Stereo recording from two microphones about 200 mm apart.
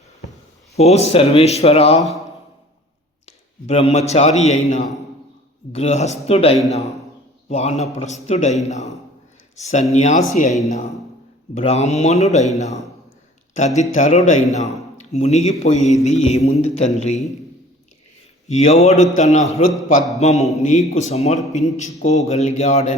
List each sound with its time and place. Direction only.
0.8 s a man's voice: 30° left (ahead or behind)
2.0 s a man's voice: centre (ahead or behind)
3.2 s a man's voice: 30° left (ahead or behind)
11.5 s a man's voice: 35° left (ahead or behind)
18.4 s a man's voice: 35° left (ahead or behind)